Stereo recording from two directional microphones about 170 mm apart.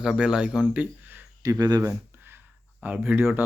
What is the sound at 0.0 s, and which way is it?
Speech, 5° right (ahead or behind).